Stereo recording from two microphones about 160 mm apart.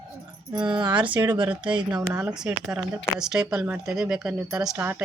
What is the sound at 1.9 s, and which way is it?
Speech, 20° right (ahead or behind).